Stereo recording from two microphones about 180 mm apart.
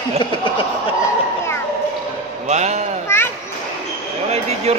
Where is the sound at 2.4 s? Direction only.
40° right (ahead or behind).